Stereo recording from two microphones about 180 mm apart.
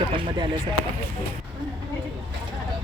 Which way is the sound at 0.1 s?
30° right (ahead or behind).